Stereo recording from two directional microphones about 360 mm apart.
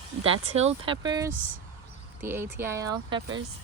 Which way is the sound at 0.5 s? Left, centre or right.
Centre.